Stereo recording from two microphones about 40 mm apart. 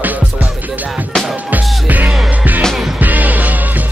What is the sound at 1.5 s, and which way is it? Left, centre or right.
Music, right.